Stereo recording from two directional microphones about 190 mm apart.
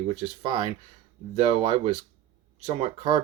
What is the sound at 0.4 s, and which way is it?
Speech, 25° right (ahead or behind).